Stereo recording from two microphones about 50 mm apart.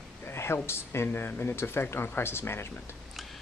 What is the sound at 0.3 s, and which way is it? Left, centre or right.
Speech, left.